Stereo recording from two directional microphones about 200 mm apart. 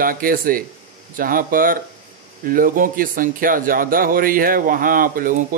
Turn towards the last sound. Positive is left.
turn(degrees=-45)  # may be behind; listen again after turning